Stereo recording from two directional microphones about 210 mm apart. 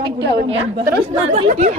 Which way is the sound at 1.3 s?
30° right (ahead or behind).